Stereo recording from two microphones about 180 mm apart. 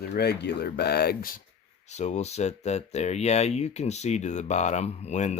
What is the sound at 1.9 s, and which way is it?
Speech, 40° left (ahead or behind).